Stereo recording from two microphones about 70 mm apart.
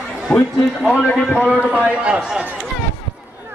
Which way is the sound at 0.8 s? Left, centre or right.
Centre.